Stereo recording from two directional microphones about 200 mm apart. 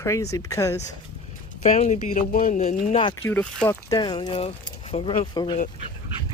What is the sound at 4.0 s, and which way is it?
Speech, 20° left (ahead or behind).